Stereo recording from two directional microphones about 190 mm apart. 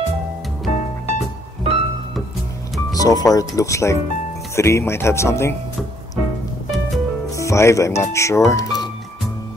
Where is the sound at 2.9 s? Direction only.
20° left (ahead or behind).